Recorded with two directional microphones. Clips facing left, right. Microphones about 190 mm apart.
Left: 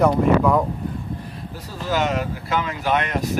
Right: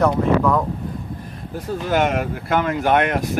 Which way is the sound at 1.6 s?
55° right (ahead or behind).